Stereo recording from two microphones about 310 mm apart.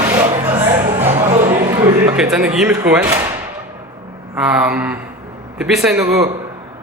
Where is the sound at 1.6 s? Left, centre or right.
Centre.